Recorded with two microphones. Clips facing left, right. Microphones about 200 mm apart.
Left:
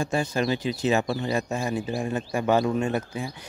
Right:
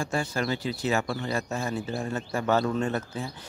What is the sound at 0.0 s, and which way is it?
Speech, 20° left (ahead or behind).